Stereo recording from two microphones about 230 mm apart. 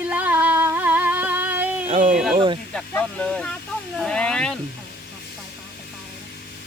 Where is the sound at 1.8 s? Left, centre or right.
Right.